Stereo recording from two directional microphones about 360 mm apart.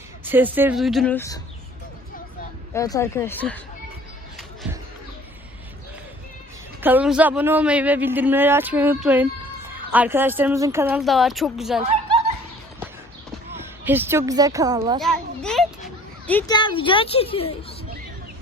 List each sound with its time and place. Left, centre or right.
0.3 s a man's voice: centre
2.7 s speech: centre
6.8 s a man's voice: centre
13.5 s speech: centre
15.0 s a child's voice: centre